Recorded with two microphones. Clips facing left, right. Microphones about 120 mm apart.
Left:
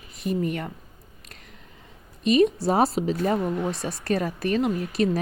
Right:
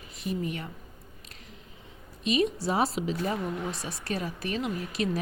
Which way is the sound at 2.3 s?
45° left (ahead or behind).